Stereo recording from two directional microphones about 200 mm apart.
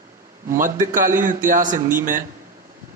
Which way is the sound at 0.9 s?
40° right (ahead or behind).